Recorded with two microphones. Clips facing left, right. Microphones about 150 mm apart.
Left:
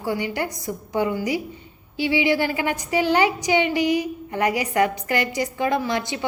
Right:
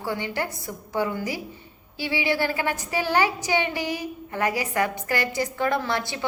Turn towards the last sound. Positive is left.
turn(degrees=20)  # may be behind; listen again after turning